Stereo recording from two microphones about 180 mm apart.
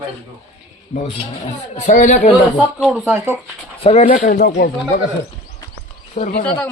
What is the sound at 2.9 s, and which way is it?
Speech, 10° right (ahead or behind).